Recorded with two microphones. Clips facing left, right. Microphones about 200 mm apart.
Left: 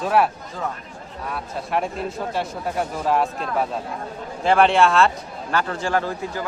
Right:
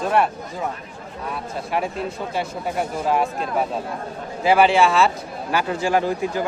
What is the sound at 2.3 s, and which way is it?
A man's voice, centre (ahead or behind).